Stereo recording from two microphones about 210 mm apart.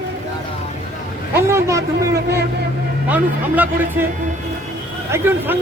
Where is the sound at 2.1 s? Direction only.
50° right (ahead or behind).